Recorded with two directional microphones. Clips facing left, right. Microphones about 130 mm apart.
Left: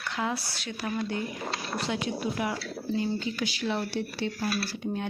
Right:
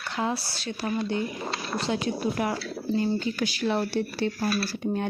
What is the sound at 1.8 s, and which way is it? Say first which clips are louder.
Speech: right 4 dB; 35° right (ahead or behind).